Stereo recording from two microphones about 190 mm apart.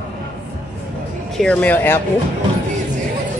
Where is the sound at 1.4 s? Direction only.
5° left (ahead or behind).